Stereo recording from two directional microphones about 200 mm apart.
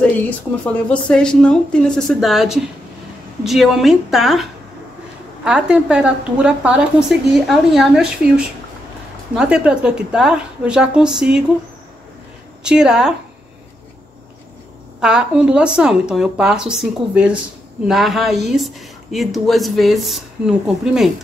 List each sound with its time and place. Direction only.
1.0 s a woman's voice: 5° left (ahead or behind)
12.6 s a woman's voice: 5° right (ahead or behind)
15.0 s a woman's voice: 5° right (ahead or behind)